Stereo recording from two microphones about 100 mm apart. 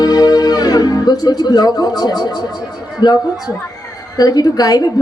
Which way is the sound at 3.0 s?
45° left (ahead or behind).